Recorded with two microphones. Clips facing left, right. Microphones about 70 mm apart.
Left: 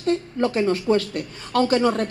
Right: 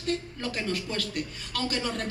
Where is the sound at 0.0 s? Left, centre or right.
Left.